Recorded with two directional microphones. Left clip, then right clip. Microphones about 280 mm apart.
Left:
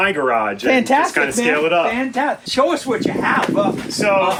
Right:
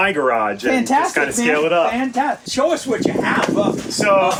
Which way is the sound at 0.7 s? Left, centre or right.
Left.